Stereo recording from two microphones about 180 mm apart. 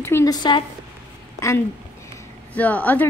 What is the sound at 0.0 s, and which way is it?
Speech, 15° left (ahead or behind).